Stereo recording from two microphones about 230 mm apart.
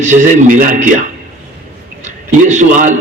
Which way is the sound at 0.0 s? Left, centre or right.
Right.